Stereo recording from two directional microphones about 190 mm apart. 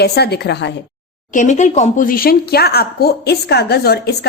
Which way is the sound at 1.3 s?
40° left (ahead or behind).